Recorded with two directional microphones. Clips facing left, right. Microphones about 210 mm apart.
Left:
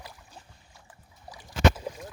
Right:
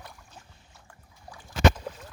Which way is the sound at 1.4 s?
10° left (ahead or behind).